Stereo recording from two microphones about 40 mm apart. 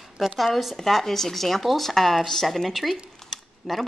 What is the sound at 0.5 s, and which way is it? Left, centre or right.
Speech, centre.